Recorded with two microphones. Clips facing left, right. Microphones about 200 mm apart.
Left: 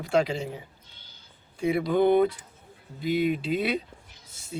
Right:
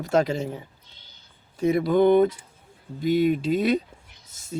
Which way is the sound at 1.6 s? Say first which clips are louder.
Right 3 dB; 45° right (ahead or behind).